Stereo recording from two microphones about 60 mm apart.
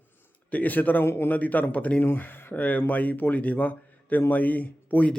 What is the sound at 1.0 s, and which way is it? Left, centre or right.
Speech, left.